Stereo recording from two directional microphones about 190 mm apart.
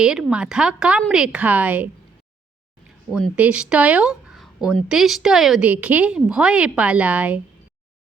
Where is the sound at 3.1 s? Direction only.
5° right (ahead or behind).